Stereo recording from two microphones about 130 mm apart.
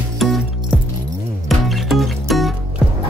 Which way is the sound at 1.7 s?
Centre (ahead or behind).